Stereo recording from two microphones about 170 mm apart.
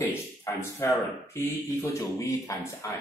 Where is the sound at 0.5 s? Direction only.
15° left (ahead or behind).